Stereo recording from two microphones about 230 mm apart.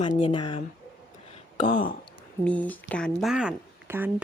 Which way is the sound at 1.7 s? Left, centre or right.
Left.